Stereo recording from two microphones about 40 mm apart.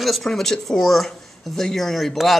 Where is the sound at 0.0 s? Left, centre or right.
Centre.